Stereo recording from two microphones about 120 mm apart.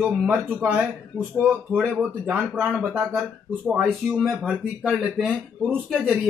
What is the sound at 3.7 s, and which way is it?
Speech, centre (ahead or behind).